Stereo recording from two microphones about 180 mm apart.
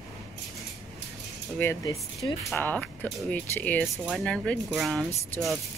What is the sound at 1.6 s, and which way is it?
Speech, 15° left (ahead or behind).